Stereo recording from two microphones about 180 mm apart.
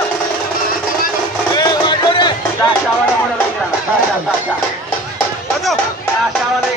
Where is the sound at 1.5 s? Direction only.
20° left (ahead or behind).